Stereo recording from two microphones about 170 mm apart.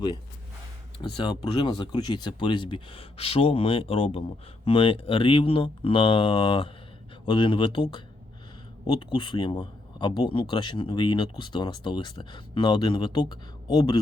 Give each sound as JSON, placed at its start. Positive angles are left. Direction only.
{"t": 0.9, "sound": "speech", "side_deg": 25}